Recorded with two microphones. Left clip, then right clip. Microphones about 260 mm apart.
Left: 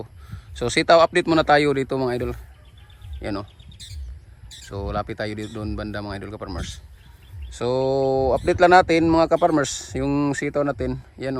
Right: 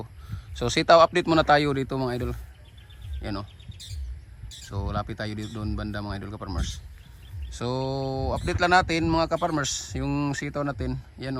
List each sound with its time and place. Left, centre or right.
0.0 s speech: centre
4.7 s speech: centre